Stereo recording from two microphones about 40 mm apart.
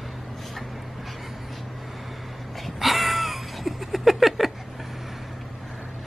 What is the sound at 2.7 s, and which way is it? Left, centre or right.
Cat, centre.